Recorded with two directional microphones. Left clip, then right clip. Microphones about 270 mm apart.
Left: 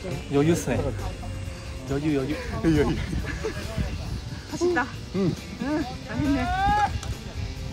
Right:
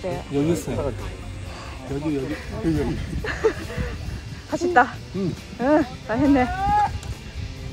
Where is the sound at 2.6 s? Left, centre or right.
Centre.